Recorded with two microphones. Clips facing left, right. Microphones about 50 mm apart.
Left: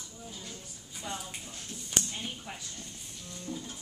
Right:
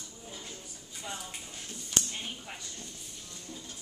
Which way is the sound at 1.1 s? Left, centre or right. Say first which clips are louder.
Left 2 dB; centre.